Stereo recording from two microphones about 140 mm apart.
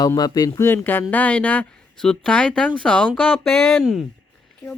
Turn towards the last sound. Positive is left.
turn(degrees=0)  # may be behind; listen again after turning